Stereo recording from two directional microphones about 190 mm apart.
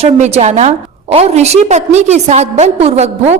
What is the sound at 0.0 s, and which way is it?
A woman's voice, 35° right (ahead or behind).